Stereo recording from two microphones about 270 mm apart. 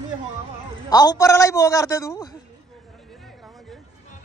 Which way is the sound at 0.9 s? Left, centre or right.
Centre.